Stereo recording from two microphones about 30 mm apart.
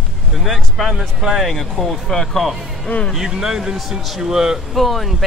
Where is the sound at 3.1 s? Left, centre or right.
Centre.